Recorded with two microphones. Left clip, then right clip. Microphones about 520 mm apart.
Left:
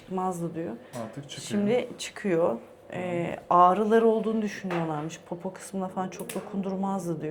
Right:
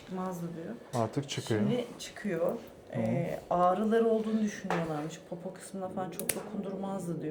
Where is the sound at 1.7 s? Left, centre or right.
Left.